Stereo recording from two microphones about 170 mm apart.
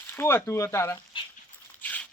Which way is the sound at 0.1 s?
15° left (ahead or behind).